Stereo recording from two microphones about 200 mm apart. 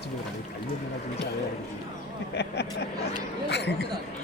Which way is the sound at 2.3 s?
55° left (ahead or behind).